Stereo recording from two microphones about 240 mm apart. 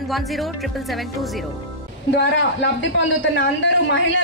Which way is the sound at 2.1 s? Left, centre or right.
Left.